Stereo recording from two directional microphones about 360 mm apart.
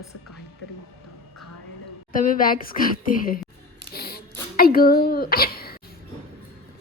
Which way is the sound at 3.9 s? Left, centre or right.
Left.